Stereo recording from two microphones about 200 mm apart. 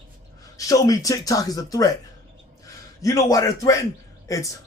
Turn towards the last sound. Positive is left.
turn(degrees=15)  # may be behind; listen again after turning